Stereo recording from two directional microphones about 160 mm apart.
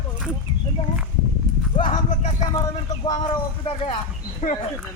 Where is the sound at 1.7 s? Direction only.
35° left (ahead or behind).